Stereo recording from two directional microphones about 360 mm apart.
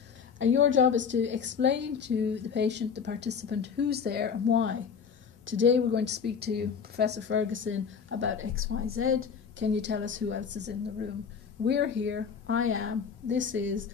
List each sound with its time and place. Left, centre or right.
0.4 s a woman's voice: right